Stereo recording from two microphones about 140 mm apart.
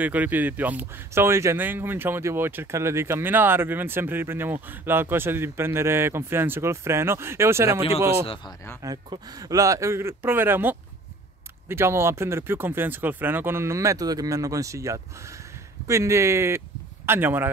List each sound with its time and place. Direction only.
0.0 s speech: 10° right (ahead or behind)
8.8 s speech: 30° right (ahead or behind)